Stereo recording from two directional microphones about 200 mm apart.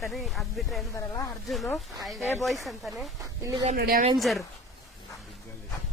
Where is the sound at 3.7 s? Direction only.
50° right (ahead or behind).